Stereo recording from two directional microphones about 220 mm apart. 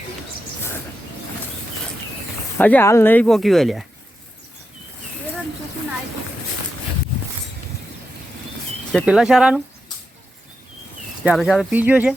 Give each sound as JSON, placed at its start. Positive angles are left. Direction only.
{"t": 2.6, "sound": "speech", "side_deg": 10}
{"t": 8.9, "sound": "speech", "side_deg": 0}
{"t": 11.2, "sound": "speech", "side_deg": 0}